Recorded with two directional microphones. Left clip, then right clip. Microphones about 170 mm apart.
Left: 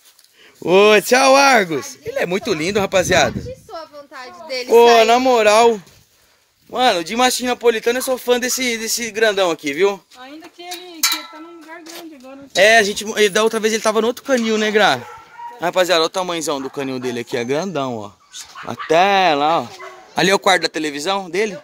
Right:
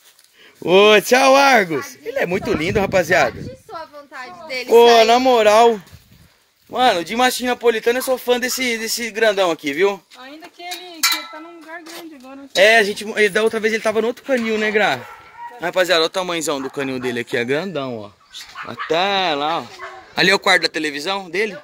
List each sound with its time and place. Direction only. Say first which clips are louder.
0.6 s speech: even; 5° left (ahead or behind)
4.1 s a sound: left 1 dB; 90° left
4.9 s speech: even; 5° left (ahead or behind)
12.5 s speech: left 1 dB; 15° left (ahead or behind)
17.6 s speech: left 3 dB; 30° left (ahead or behind)
18.9 s speech: left 5 dB; 50° left (ahead or behind)
20.2 s speech: even; 20° left (ahead or behind)